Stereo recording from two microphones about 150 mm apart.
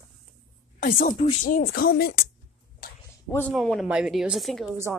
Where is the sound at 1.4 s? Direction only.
85° left.